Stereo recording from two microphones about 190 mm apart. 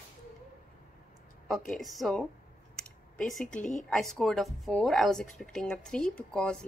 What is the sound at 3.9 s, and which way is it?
A woman's voice, centre (ahead or behind).